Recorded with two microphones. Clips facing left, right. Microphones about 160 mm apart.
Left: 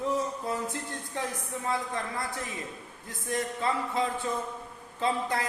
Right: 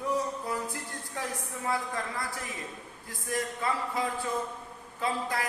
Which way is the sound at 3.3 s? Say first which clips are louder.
Left 2 dB; 25° left (ahead or behind).